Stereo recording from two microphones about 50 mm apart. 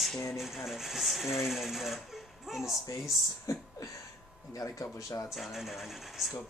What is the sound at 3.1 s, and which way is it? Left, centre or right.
Speech, left.